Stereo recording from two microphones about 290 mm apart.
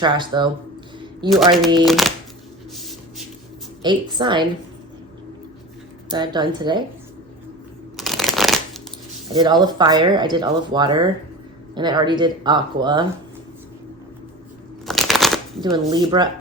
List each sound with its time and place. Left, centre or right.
0.0 s speech: centre
1.8 s speech: centre
2.7 s a sound: centre
3.8 s speech: centre
6.1 s speech: centre
7.9 s a sound: centre
9.3 s speech: centre
14.8 s shuffling cards: centre
15.6 s speech: centre